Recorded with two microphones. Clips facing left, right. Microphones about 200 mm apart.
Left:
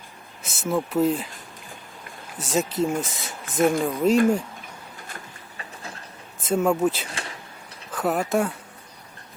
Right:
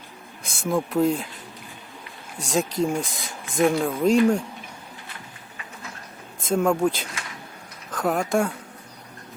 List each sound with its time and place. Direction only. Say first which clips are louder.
0.4 s speech: right 1 dB; 5° left (ahead or behind)
2.4 s speech: even; 5° left (ahead or behind)
5.0 s vehicle: left 1 dB; 40° left (ahead or behind)
6.5 s speech: even; 5° left (ahead or behind)
7.1 s a sound: left 2 dB; 30° left (ahead or behind)
7.9 s speech: even; 5° left (ahead or behind)